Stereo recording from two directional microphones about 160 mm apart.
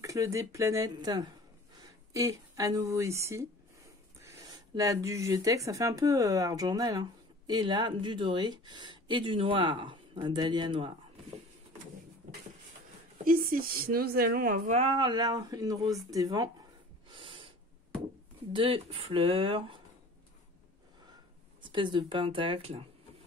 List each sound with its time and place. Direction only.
0.0 s a woman's voice: 20° right (ahead or behind)
13.2 s a woman's voice: 65° right (ahead or behind)
14.7 s speech: 40° right (ahead or behind); by 16.4 s 20° right (ahead or behind)
17.1 s snort: 30° right (ahead or behind)
18.5 s speech: 35° right (ahead or behind)
21.5 s speech: 30° right (ahead or behind)